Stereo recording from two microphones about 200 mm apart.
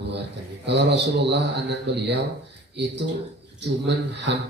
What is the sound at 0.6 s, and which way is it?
A man's voice, 60° right (ahead or behind).